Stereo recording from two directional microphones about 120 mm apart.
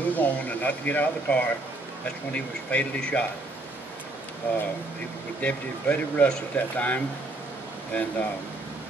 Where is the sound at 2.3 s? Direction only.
10° left (ahead or behind).